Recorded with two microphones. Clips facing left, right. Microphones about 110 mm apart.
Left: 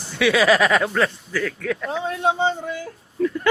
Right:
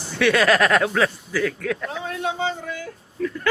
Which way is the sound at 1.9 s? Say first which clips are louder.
Left 5 dB; 30° left (ahead or behind).